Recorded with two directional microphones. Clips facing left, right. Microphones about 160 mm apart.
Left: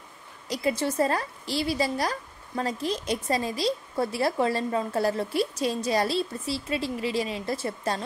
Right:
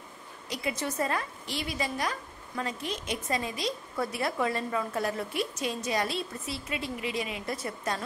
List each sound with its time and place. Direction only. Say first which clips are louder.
0.5 s a woman's voice: left 6 dB; 35° left (ahead or behind)